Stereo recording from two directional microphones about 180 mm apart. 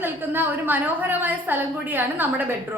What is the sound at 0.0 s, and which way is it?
A woman's voice, 10° right (ahead or behind).